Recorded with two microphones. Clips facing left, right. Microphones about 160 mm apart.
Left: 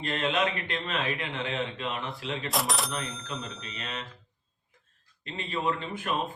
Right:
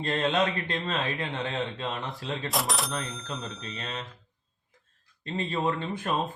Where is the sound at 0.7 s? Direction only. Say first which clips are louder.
Right 1 dB; 35° right (ahead or behind).